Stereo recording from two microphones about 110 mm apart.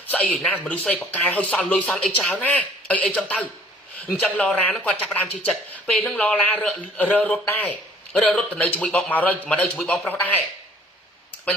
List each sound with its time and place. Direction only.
0.1 s speech: 10° left (ahead or behind)
10.1 s speech: 15° left (ahead or behind)